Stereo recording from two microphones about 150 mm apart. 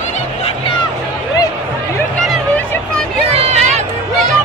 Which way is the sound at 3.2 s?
45° right (ahead or behind).